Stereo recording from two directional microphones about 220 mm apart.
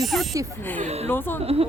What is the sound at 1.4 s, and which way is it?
Speech, 25° right (ahead or behind).